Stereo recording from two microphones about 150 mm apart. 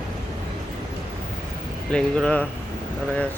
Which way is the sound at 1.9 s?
5° left (ahead or behind).